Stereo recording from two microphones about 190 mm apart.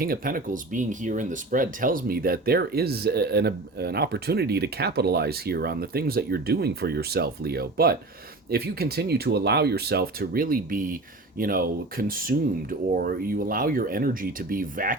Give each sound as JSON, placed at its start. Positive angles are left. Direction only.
{"t": 0.0, "sound": "speech", "side_deg": -50}